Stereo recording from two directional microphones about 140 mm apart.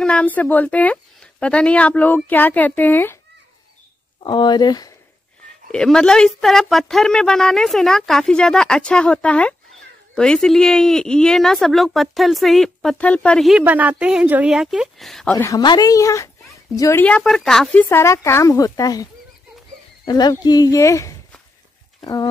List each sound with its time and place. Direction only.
0.0 s speech: 10° left (ahead or behind)
4.2 s speech: 30° left (ahead or behind)
5.7 s speech: 5° left (ahead or behind)
13.6 s speech: 10° right (ahead or behind)
15.3 s speech: 25° left (ahead or behind)
17.0 s speech: 5° left (ahead or behind)
17.8 s speech: 20° left (ahead or behind)
20.1 s speech: 30° left (ahead or behind)